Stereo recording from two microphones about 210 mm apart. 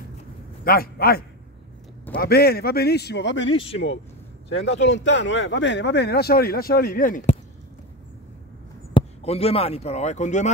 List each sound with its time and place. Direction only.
0.7 s speech: 45° left (ahead or behind)
3.5 s speech: 25° left (ahead or behind)
4.6 s speech: 60° left (ahead or behind); by 7.3 s 40° left (ahead or behind)
8.9 s speech: 30° left (ahead or behind)